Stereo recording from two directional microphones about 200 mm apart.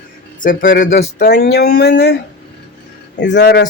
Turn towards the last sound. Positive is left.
turn(degrees=60)  # may be behind; listen again after turning